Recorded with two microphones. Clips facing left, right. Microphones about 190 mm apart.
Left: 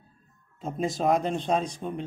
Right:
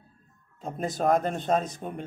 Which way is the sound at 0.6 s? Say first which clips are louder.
Left 1 dB; centre (ahead or behind).